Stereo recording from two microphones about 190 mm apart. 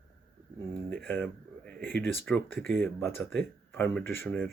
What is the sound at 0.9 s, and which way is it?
Speech, 10° left (ahead or behind).